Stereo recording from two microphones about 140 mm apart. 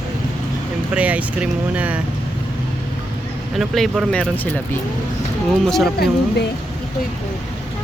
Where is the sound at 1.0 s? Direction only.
10° right (ahead or behind).